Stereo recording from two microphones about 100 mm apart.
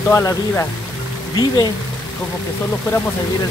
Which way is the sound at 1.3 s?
45° left (ahead or behind).